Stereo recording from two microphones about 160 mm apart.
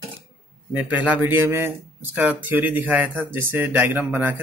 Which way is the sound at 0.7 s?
10° right (ahead or behind).